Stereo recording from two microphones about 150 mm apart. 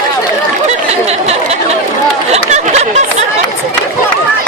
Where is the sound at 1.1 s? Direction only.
45° right (ahead or behind).